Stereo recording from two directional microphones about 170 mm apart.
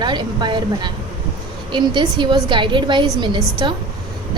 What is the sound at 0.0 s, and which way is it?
A woman's voice, 25° right (ahead or behind).